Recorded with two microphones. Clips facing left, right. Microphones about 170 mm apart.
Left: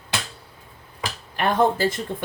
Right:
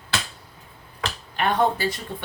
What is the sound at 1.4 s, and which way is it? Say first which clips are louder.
Speech: left 2 dB; 50° left (ahead or behind).